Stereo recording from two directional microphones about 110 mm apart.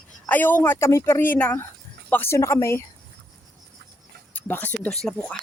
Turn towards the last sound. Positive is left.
turn(degrees=5)  # may be behind; listen again after turning